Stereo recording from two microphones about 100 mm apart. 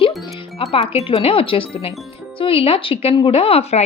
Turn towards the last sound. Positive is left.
turn(degrees=90)